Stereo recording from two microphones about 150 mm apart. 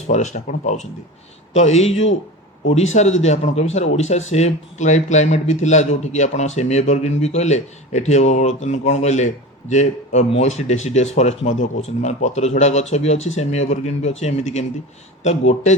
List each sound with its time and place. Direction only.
0.1 s speech: 50° left (ahead or behind)